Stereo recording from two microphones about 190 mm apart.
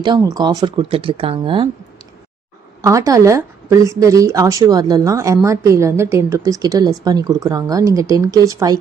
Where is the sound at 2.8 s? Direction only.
15° right (ahead or behind).